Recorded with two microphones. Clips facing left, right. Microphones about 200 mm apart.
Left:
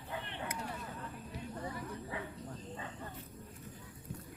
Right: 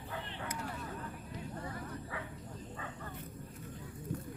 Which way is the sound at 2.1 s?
20° left (ahead or behind).